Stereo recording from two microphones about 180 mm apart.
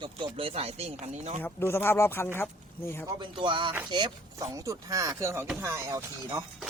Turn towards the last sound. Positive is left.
turn(degrees=-20)  # may be behind; listen again after turning